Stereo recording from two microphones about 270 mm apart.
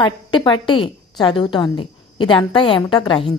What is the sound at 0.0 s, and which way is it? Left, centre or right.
A woman's voice, centre.